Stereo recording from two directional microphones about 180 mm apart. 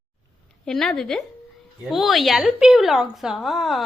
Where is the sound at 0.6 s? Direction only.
5° left (ahead or behind).